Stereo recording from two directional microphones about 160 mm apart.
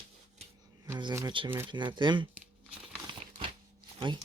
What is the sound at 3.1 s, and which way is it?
Crumpling, 30° right (ahead or behind).